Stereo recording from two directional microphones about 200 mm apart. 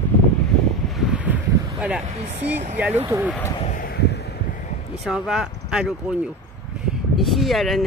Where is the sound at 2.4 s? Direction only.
10° right (ahead or behind).